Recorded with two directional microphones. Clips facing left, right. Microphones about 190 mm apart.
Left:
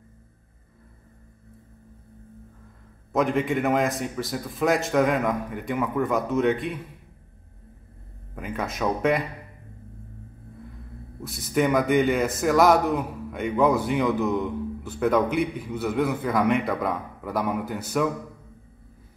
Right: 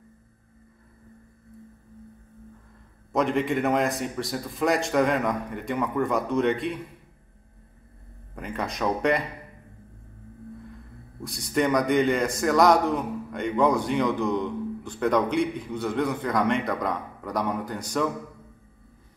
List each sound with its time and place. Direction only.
3.1 s a man's voice: centre (ahead or behind)
8.4 s a man's voice: 5° left (ahead or behind)
11.1 s a man's voice: 5° left (ahead or behind)